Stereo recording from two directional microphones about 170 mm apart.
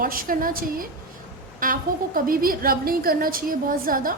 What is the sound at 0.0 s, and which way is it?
A woman's voice, 55° right (ahead or behind).